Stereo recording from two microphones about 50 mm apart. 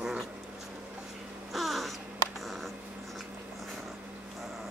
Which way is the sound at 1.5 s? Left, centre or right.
Centre.